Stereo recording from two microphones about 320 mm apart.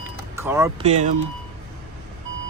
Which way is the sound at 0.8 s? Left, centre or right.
Right.